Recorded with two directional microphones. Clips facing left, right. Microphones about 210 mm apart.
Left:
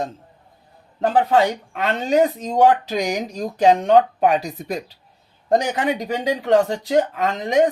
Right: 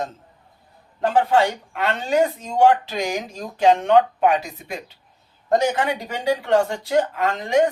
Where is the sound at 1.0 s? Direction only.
20° left (ahead or behind).